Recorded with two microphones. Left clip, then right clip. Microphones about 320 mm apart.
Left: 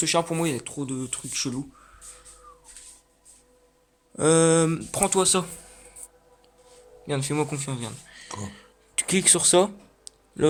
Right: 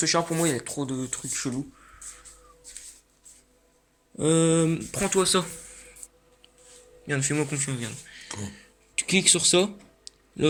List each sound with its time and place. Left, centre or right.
0.0 s speech: centre
4.2 s speech: centre
7.1 s speech: centre
8.4 s a sound: left